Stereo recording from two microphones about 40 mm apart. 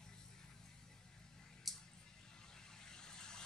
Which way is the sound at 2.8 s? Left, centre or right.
Centre.